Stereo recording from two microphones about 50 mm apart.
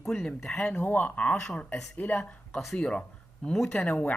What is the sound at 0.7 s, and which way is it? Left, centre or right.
Speech, left.